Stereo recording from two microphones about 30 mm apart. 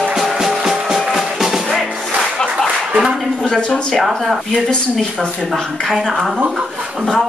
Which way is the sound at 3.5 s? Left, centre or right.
Left.